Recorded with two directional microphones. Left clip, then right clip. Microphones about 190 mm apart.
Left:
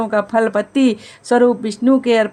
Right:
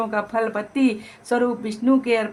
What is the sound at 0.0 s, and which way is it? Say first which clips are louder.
A woman's voice: left 7 dB; 30° left (ahead or behind).